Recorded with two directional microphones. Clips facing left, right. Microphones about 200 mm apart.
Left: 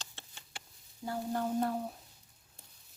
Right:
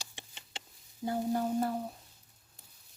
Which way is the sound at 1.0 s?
15° right (ahead or behind).